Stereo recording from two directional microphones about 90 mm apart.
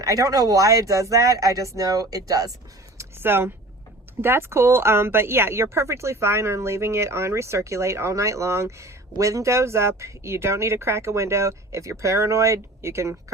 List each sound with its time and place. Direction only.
0.0 s speech: 40° right (ahead or behind)
3.0 s a sound: 25° right (ahead or behind)
4.2 s speech: 25° right (ahead or behind)